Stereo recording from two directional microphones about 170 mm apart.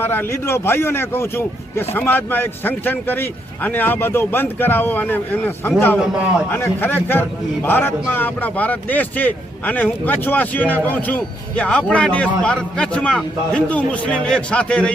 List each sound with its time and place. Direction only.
0.0 s a man's voice: 10° left (ahead or behind)